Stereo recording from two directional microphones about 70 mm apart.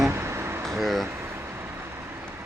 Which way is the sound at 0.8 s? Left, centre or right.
Centre.